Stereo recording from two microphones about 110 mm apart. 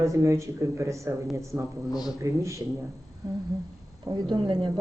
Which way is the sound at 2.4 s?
25° right (ahead or behind).